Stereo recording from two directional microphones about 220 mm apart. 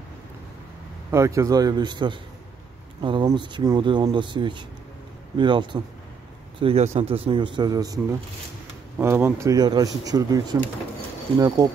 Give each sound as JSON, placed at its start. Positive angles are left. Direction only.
{"t": 1.1, "sound": "speech", "side_deg": -15}